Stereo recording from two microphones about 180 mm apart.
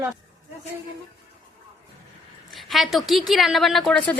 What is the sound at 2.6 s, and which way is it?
A woman's voice, centre (ahead or behind).